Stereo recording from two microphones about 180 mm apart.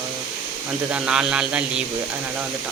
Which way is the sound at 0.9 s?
5° right (ahead or behind).